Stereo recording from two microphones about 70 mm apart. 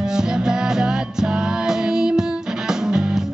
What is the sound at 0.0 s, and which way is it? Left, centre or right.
Music, centre.